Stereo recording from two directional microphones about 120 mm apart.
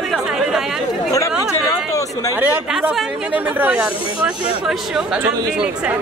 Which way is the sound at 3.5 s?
10° right (ahead or behind).